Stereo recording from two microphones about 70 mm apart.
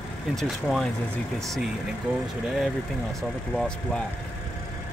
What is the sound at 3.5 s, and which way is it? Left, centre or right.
Speech, centre.